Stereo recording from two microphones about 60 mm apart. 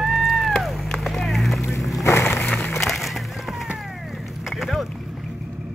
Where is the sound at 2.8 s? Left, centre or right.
Centre.